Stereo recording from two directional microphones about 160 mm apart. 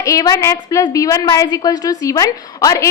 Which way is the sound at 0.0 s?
20° left (ahead or behind).